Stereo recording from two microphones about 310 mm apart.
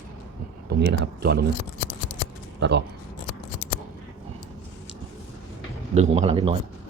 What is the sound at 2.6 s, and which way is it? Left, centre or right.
Speech, right.